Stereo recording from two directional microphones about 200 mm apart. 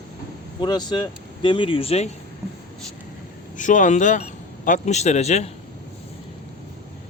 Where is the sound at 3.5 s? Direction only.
40° left (ahead or behind).